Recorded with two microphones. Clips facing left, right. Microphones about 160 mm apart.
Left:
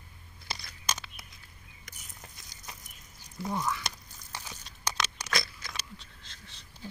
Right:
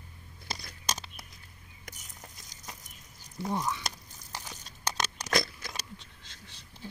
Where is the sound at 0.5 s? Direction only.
40° right (ahead or behind).